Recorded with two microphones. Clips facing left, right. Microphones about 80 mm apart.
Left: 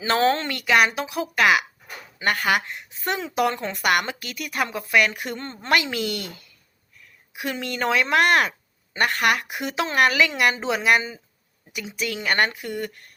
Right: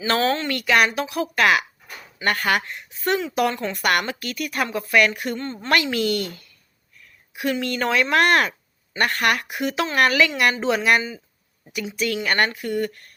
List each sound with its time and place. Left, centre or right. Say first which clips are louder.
0.0 s a woman's voice: left 1 dB; left
3.8 s a woman's voice: even; centre